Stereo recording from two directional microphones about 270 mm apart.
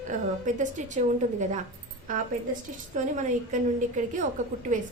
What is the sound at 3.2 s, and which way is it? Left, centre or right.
A woman's voice, right.